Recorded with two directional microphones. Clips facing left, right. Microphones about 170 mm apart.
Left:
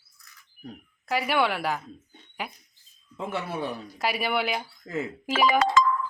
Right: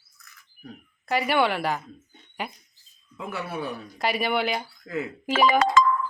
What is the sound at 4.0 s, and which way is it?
Speech, 5° left (ahead or behind).